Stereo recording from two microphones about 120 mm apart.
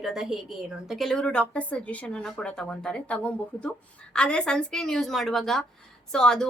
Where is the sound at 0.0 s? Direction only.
Centre (ahead or behind).